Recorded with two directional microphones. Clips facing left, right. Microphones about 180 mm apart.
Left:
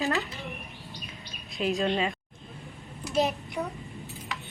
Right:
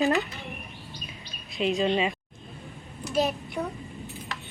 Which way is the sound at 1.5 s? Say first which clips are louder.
Right 2 dB; centre (ahead or behind).